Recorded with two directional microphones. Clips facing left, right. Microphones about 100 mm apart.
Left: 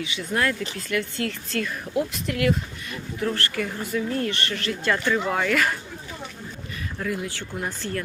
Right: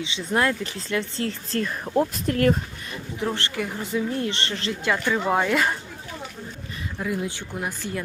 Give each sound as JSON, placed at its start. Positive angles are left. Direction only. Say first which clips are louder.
{"t": 0.0, "sound": "speech", "louder": "right 2 dB", "side_deg": -25}
{"t": 3.2, "sound": "speech", "louder": "left 1 dB", "side_deg": -20}
{"t": 4.8, "sound": "speech", "louder": "even", "side_deg": -15}
{"t": 7.0, "sound": "speech", "louder": "right 1 dB", "side_deg": -20}